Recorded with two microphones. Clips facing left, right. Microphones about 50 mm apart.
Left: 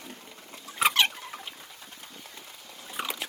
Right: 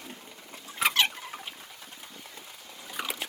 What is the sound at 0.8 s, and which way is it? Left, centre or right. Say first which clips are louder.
Rodents: left 2 dB; left.